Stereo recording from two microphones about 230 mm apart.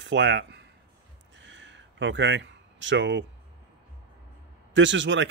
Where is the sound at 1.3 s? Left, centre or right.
Right.